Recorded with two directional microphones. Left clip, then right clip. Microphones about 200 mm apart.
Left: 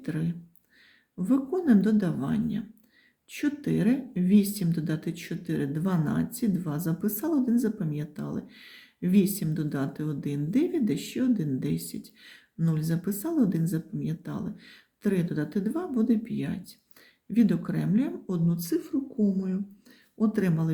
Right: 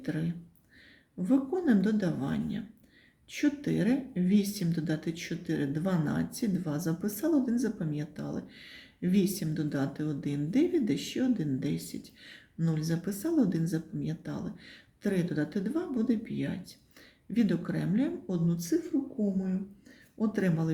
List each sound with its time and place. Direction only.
0.0 s speech: 20° left (ahead or behind)